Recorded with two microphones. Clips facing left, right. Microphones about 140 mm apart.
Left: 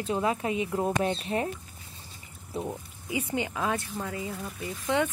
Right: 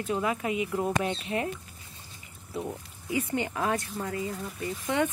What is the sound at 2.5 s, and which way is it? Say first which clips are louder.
Speech: left 1 dB; 15° left (ahead or behind).